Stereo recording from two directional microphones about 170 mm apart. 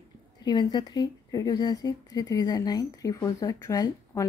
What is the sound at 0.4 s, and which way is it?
Speech, 25° left (ahead or behind).